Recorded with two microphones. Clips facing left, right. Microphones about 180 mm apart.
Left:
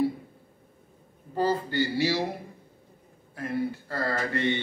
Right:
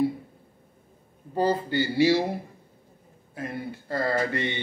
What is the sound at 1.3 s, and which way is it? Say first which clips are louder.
Speech: right 2 dB; 15° right (ahead or behind).